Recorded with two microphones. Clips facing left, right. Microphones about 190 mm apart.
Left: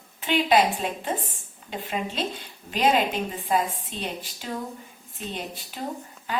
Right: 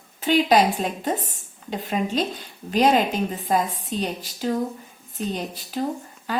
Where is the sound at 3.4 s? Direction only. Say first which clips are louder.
Even; 40° right (ahead or behind).